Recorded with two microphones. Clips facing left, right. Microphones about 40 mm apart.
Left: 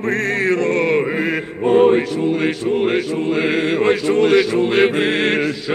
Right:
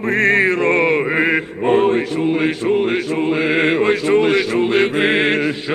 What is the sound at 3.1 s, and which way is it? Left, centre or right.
Speech, centre.